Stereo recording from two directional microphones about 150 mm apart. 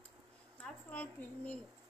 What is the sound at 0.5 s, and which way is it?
A woman's voice, 10° left (ahead or behind).